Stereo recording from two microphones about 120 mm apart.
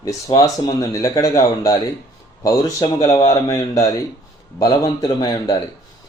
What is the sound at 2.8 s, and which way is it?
Speech, 30° left (ahead or behind).